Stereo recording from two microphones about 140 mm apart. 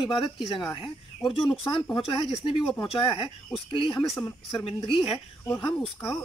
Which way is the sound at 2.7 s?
35° left (ahead or behind).